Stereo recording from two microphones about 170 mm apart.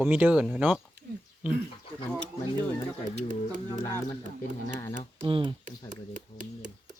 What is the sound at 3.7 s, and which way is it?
Speech, 20° left (ahead or behind).